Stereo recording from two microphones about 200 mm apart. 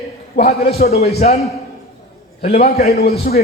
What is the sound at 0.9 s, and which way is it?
Speech, 30° left (ahead or behind).